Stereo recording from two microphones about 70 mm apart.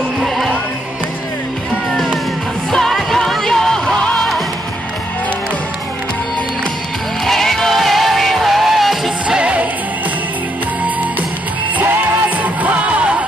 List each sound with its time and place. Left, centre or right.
0.2 s music: centre
2.7 s music: centre
7.2 s music: centre
9.4 s music: centre
11.8 s music: right